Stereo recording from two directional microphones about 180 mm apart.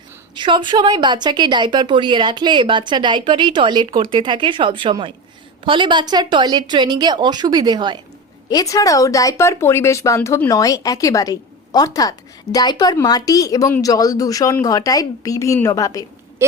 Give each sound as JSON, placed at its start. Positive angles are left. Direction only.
{"t": 0.3, "sound": "a woman's voice", "side_deg": -25}
{"t": 8.4, "sound": "speech", "side_deg": 20}